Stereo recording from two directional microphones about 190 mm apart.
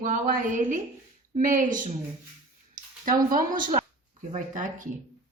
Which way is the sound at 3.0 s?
45° right (ahead or behind).